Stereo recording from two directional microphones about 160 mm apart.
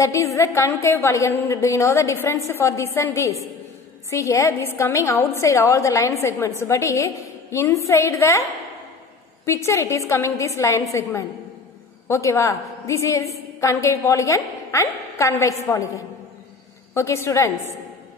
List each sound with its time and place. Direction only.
0.0 s a woman's voice: 20° left (ahead or behind)
9.5 s a woman's voice: 20° left (ahead or behind)